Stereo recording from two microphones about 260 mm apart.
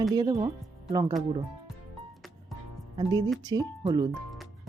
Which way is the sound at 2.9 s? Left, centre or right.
Centre.